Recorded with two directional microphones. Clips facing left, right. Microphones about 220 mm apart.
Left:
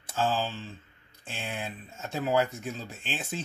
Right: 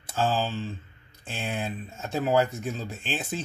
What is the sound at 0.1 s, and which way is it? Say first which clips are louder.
Speech: right 2 dB; 40° right (ahead or behind).